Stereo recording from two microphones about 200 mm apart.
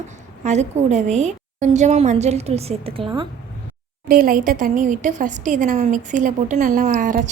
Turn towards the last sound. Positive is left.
turn(degrees=-40)  # may be behind; listen again after turning